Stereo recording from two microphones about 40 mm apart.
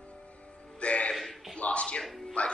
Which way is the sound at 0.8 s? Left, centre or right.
Left.